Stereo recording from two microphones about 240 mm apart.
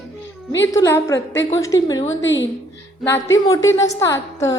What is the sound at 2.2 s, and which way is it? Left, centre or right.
Speech, left.